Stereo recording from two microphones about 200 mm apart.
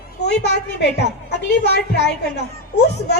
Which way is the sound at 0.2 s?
55° left (ahead or behind).